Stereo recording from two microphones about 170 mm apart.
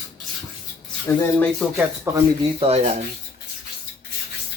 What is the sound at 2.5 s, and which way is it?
Speech, 35° right (ahead or behind).